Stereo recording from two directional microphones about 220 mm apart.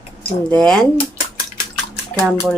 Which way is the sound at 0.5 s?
5° left (ahead or behind).